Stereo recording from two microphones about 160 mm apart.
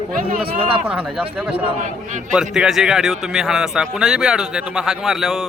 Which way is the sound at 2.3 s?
5° right (ahead or behind).